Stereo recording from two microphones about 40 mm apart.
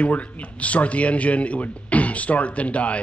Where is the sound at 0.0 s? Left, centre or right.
Left.